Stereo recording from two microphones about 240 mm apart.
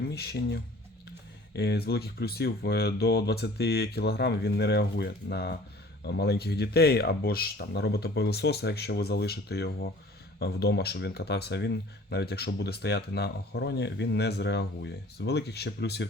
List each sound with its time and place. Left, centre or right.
0.1 s speech: left